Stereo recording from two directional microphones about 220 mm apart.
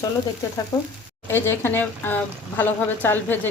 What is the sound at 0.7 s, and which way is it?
A woman's voice, 15° left (ahead or behind).